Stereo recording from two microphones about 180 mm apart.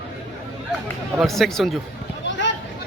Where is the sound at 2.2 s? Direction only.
85° left.